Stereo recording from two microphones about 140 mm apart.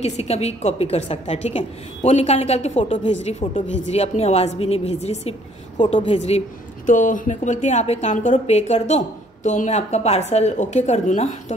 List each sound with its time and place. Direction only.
0.0 s a woman's voice: 50° left (ahead or behind)
5.8 s a woman's voice: 40° left (ahead or behind)
6.9 s speech: 65° left (ahead or behind)